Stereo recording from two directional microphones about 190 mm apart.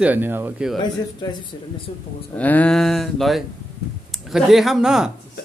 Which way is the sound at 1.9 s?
30° left (ahead or behind).